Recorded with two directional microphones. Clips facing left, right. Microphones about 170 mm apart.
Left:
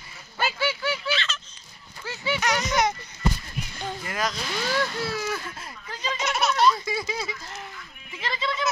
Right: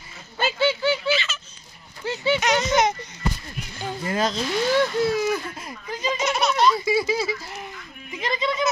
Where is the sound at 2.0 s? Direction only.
25° right (ahead or behind).